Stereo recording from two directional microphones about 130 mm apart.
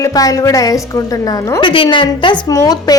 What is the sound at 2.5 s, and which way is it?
Speech, 30° left (ahead or behind).